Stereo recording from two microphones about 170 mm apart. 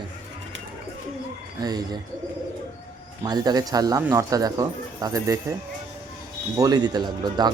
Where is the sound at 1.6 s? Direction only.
25° right (ahead or behind).